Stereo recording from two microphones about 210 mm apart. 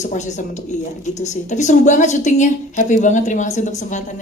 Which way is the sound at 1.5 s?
35° left (ahead or behind).